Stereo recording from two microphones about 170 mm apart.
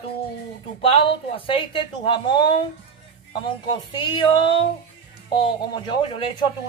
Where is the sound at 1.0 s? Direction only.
30° left (ahead or behind).